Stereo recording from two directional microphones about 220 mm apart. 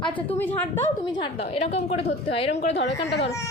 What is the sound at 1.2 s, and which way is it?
A woman's voice, 30° left (ahead or behind).